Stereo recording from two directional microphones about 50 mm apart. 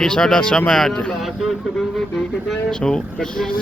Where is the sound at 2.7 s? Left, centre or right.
Centre.